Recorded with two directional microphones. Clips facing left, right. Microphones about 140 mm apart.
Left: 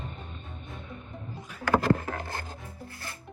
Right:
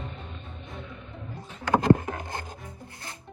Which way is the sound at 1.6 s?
20° right (ahead or behind).